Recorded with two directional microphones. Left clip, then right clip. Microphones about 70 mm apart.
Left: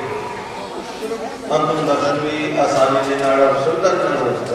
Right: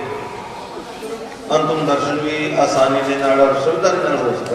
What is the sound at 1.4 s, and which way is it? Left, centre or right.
A man's voice, right.